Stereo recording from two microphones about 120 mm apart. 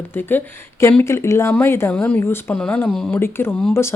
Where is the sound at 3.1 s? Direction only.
20° left (ahead or behind).